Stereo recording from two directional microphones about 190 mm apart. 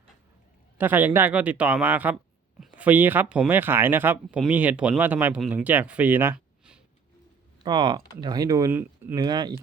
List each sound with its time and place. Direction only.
0.8 s speech: 10° right (ahead or behind)
7.6 s speech: 20° right (ahead or behind)